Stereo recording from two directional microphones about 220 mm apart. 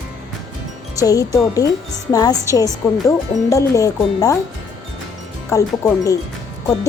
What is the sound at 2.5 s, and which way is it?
Speech, 15° right (ahead or behind).